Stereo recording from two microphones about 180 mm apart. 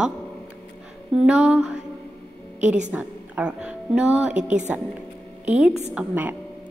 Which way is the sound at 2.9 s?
5° right (ahead or behind).